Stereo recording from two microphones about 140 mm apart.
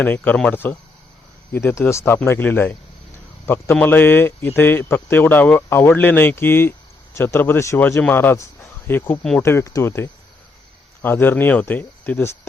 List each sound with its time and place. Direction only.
0.0 s speech: 10° left (ahead or behind)